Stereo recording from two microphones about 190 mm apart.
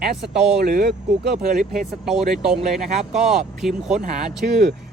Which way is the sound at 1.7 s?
Centre (ahead or behind).